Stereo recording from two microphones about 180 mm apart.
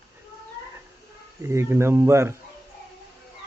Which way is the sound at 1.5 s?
15° right (ahead or behind).